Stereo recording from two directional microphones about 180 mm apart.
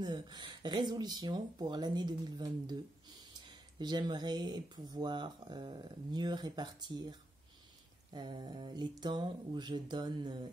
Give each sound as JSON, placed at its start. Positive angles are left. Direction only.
{"t": 0.0, "sound": "speech", "side_deg": -25}
{"t": 3.8, "sound": "speech", "side_deg": -25}